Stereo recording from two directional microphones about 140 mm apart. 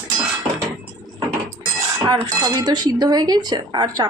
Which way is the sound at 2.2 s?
30° right (ahead or behind).